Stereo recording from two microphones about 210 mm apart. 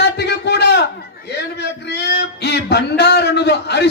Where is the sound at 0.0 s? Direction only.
50° left (ahead or behind).